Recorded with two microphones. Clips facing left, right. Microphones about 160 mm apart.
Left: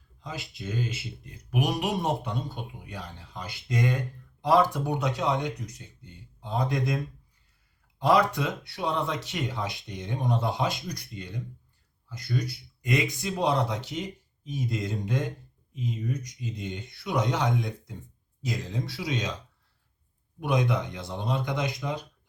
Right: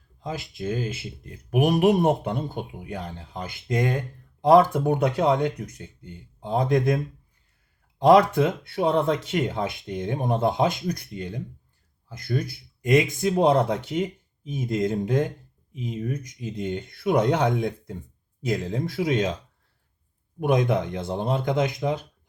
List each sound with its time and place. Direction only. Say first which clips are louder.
0.2 s speech: right 7 dB; 50° right (ahead or behind)
7.9 s speech: right 7 dB; 50° right (ahead or behind)
20.4 s speech: right 5 dB; 50° right (ahead or behind)